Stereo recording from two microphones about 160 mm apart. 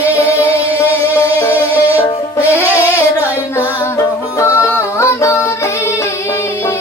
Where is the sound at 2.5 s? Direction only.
10° right (ahead or behind).